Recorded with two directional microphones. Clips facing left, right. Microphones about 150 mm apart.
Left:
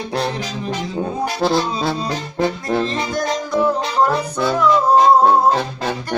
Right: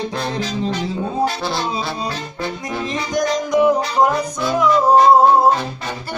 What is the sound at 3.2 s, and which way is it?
Music, 10° right (ahead or behind).